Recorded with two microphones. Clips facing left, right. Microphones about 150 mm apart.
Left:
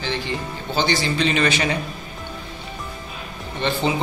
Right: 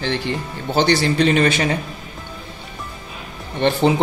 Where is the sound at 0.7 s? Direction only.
70° right (ahead or behind); by 1.6 s 50° right (ahead or behind).